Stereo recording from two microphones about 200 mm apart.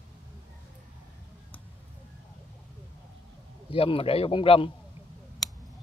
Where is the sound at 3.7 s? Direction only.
25° left (ahead or behind).